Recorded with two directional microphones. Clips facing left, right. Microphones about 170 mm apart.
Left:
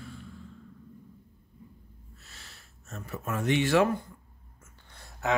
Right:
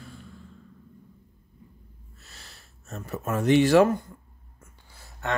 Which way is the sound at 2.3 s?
40° right (ahead or behind).